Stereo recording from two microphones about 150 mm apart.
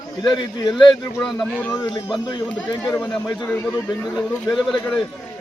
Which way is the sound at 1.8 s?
30° left (ahead or behind).